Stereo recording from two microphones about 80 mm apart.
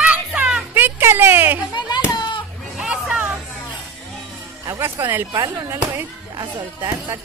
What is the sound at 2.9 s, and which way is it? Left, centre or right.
Music, centre.